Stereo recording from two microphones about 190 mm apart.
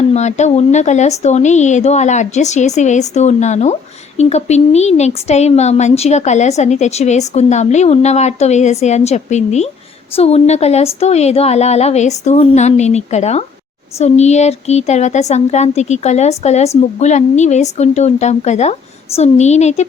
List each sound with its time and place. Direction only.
0.1 s speech: 35° left (ahead or behind)